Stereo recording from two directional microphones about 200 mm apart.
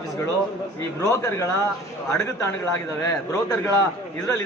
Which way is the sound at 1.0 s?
15° left (ahead or behind).